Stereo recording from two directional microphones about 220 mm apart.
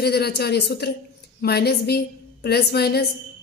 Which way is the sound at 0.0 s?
45° left (ahead or behind).